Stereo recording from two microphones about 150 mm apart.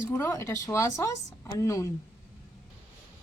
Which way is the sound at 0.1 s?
20° left (ahead or behind).